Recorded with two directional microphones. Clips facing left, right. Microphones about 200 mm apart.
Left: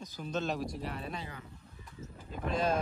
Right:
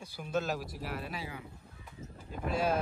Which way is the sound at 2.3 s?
5° right (ahead or behind).